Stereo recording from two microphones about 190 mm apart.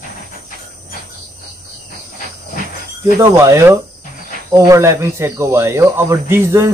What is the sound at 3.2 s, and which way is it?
Speech, 15° right (ahead or behind).